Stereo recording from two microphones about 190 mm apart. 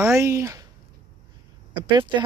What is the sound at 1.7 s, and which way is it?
Speech, 25° right (ahead or behind).